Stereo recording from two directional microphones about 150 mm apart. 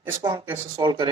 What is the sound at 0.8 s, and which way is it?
Speech, 30° right (ahead or behind).